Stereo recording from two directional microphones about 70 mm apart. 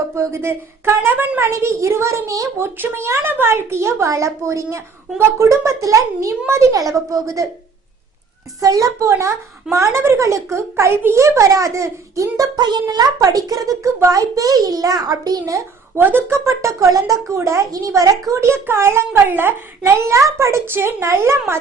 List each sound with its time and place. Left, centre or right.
0.1 s a child's voice: right
1.5 s a woman's voice: right
2.6 s a child's voice: right
8.6 s a woman's voice: right
12.5 s a child's voice: right
16.0 s a woman's voice: right
17.3 s a woman's voice: right
17.7 s a woman's voice: right